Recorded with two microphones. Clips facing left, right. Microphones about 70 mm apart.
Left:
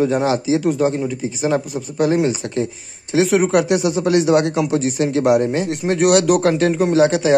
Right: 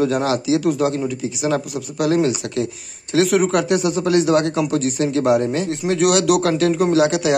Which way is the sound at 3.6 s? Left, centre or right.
Right.